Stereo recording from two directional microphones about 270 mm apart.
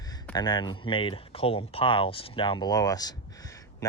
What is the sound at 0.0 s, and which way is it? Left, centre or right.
Speech, centre.